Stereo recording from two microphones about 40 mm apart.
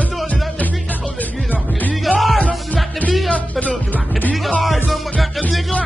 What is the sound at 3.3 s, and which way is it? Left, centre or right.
Music, left.